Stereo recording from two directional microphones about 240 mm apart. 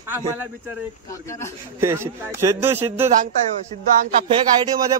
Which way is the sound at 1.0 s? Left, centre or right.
Centre.